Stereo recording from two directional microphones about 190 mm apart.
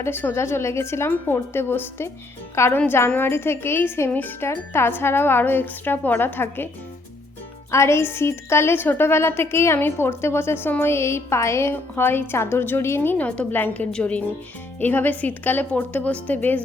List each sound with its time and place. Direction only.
0.0 s a woman's voice: 10° left (ahead or behind)
7.7 s a woman's voice: 15° left (ahead or behind)